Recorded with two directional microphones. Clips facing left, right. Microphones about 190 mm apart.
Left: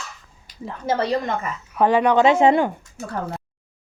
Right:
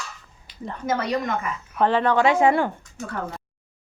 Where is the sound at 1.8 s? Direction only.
15° left (ahead or behind).